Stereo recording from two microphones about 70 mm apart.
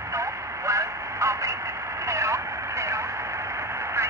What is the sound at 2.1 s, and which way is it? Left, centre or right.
Radio, right.